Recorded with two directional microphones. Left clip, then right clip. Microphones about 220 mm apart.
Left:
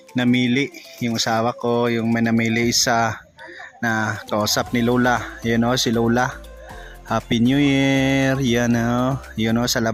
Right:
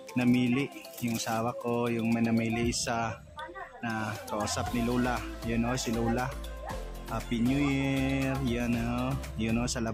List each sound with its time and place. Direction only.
0.3 s speech: 25° right (ahead or behind)
1.1 s speech: 25° left (ahead or behind)